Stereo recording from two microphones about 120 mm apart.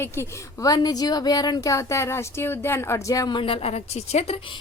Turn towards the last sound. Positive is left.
turn(degrees=50)  # may be behind; listen again after turning